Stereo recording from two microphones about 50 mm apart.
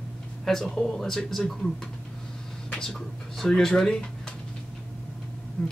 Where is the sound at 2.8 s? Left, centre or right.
Centre.